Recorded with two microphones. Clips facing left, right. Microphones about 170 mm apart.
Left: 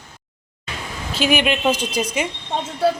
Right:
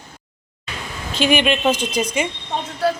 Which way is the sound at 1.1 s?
5° left (ahead or behind).